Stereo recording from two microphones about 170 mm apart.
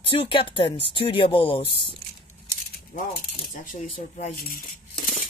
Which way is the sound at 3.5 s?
50° left (ahead or behind).